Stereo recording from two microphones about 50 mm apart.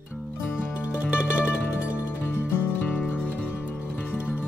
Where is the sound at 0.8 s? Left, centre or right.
Right.